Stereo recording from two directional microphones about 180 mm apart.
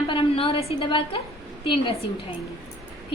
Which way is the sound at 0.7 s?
30° left (ahead or behind).